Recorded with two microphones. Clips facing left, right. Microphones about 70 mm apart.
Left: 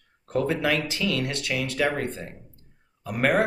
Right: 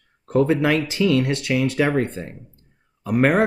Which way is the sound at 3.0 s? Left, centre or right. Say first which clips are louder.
Right 7 dB; right.